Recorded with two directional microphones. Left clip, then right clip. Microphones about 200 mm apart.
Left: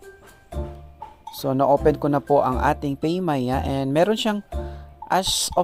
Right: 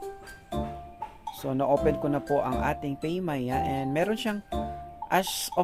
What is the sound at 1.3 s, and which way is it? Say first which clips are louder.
Speech: left 7 dB; 40° left (ahead or behind).